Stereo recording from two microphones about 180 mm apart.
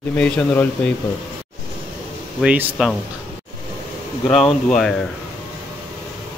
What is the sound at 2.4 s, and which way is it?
Speech, 10° right (ahead or behind).